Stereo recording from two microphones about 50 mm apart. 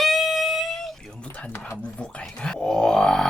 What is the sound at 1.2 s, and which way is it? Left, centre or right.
Chopping, left.